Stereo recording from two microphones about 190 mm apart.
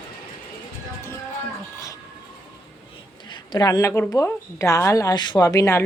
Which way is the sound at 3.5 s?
20° left (ahead or behind).